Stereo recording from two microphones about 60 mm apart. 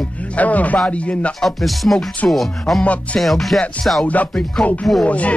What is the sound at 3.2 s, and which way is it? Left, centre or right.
Music, centre.